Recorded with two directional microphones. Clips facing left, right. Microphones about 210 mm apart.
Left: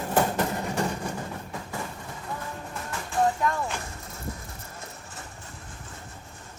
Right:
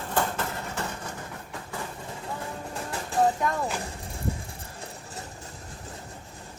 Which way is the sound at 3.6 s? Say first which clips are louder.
Right 2 dB; 30° right (ahead or behind).